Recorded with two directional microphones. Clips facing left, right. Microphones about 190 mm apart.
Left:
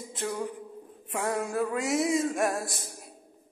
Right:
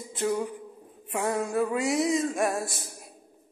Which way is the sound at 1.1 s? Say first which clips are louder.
Right 2 dB; 5° right (ahead or behind).